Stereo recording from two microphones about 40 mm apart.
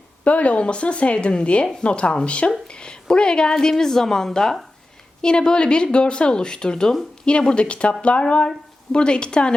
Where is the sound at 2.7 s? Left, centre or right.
Left.